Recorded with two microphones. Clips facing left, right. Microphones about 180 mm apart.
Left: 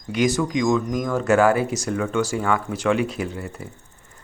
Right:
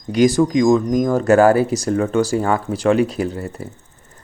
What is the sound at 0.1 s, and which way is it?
Speech, 35° right (ahead or behind).